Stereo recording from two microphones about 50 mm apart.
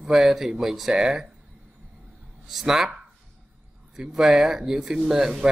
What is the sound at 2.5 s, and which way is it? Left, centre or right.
Speech, centre.